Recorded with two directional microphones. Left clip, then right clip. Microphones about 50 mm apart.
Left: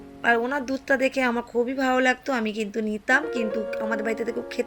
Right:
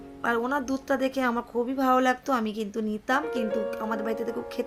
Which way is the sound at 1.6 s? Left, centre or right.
Right.